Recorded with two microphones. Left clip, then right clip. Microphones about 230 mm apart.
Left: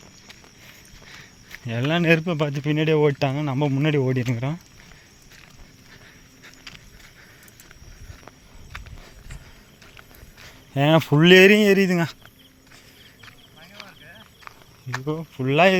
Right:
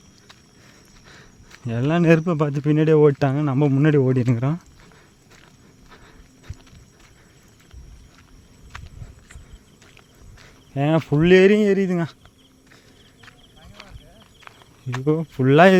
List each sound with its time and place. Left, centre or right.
1.9 s speech: right
10.4 s speech: centre
13.2 s a sound: centre
15.0 s speech: right